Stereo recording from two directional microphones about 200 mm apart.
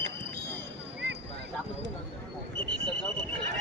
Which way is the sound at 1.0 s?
60° right (ahead or behind).